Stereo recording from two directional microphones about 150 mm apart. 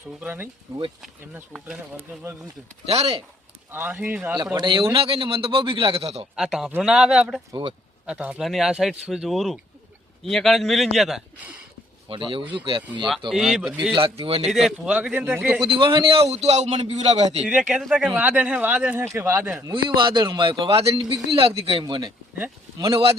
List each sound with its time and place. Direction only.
0.2 s speech: 10° right (ahead or behind)
2.8 s a man's voice: 45° right (ahead or behind)
3.7 s speech: 15° right (ahead or behind)
4.5 s a man's voice: 30° right (ahead or behind)
6.3 s speech: 5° right (ahead or behind)
12.0 s a man's voice: 35° right (ahead or behind)
13.3 s speech: 5° right (ahead or behind)
14.3 s a man's voice: 40° right (ahead or behind)
14.5 s speech: 5° right (ahead or behind)
15.6 s a man's voice: 35° right (ahead or behind)
17.4 s speech: 5° right (ahead or behind)
19.7 s a man's voice: 35° right (ahead or behind)
20.9 s a man's voice: 30° right (ahead or behind)